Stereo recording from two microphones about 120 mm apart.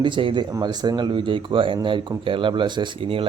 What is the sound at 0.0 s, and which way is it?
Speech, 45° right (ahead or behind).